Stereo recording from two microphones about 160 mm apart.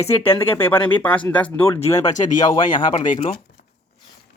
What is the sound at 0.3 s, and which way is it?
Speech, 15° left (ahead or behind).